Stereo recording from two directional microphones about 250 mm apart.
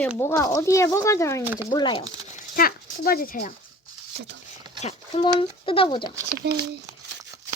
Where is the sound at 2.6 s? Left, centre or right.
Left.